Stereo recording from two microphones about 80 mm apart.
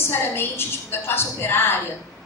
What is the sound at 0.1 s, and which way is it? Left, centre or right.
A woman's voice, left.